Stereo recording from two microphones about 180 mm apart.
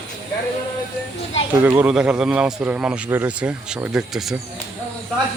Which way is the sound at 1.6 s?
10° right (ahead or behind).